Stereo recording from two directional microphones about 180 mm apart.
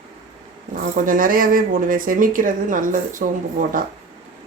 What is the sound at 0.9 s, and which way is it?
Speech, 50° right (ahead or behind).